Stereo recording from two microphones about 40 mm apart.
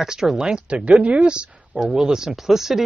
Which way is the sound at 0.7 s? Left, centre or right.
Right.